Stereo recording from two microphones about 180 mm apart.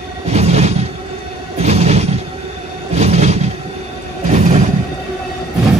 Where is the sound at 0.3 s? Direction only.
35° right (ahead or behind).